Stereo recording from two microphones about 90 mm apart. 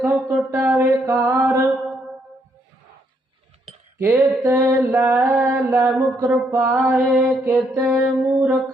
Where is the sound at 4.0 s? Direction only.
20° right (ahead or behind).